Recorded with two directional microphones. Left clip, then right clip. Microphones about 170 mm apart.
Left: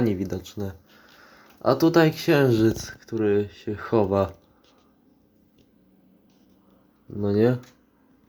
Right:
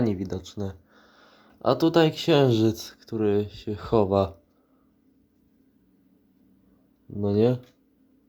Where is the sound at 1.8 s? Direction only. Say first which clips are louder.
Left 2 dB; 30° right (ahead or behind).